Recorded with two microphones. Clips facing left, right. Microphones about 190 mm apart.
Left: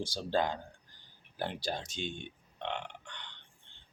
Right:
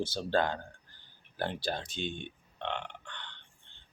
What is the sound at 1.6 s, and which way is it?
Speech, 55° right (ahead or behind).